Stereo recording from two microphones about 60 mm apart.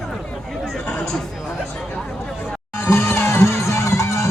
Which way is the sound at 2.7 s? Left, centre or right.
Left.